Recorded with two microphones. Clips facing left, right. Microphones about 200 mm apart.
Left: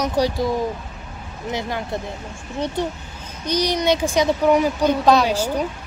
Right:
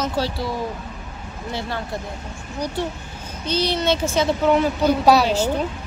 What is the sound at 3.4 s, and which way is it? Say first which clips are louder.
Speech: left 1 dB; 15° left (ahead or behind).